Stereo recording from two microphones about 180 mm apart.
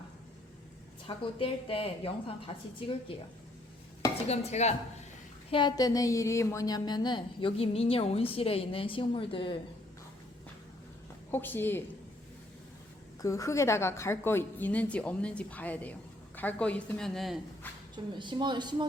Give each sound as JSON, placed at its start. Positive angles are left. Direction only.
{"t": 1.0, "sound": "a woman's voice", "side_deg": 30}
{"t": 4.3, "sound": "a woman's voice", "side_deg": 40}
{"t": 5.5, "sound": "a woman's voice", "side_deg": 25}
{"t": 11.3, "sound": "a woman's voice", "side_deg": 10}
{"t": 13.2, "sound": "a woman's voice", "side_deg": 15}
{"t": 17.9, "sound": "a woman's voice", "side_deg": -25}